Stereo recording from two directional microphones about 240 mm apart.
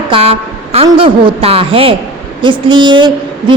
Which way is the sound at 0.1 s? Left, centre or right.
Right.